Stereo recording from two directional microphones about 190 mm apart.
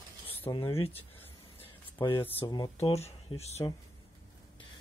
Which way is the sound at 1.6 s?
25° left (ahead or behind).